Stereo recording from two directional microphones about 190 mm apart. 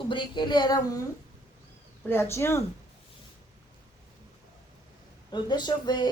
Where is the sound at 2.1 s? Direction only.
15° left (ahead or behind).